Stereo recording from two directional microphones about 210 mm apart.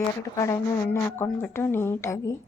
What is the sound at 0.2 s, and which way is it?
A woman's voice, 15° left (ahead or behind).